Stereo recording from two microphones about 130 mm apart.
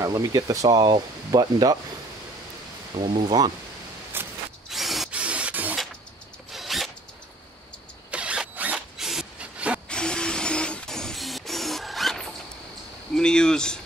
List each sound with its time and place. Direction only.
0.0 s speech: 25° right (ahead or behind)
3.1 s speech: 30° right (ahead or behind)
4.1 s a sound: 15° right (ahead or behind)
4.6 s wood: centre (ahead or behind)
6.5 s zipper: centre (ahead or behind)
8.1 s zipper: 10° right (ahead or behind)
9.8 s printer: 5° left (ahead or behind)
13.1 s a sound: 5° left (ahead or behind)